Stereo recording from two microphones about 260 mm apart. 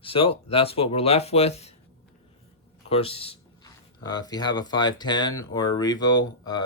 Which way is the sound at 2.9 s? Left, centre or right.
Left.